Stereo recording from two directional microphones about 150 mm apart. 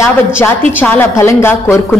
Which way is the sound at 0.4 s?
15° left (ahead or behind).